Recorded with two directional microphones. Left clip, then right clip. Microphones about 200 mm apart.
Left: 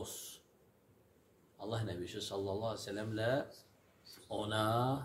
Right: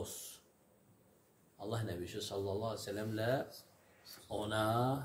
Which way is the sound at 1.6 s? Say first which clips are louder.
Even; 10° left (ahead or behind).